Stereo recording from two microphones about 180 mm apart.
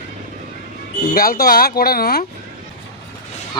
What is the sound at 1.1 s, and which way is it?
Speech, 55° left (ahead or behind).